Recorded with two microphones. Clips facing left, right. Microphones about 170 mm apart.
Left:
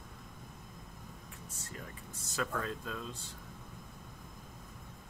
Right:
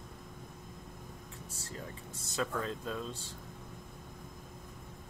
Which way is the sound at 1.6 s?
30° right (ahead or behind).